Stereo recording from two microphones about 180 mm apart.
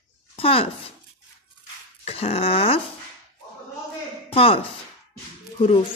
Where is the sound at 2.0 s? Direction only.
35° left (ahead or behind).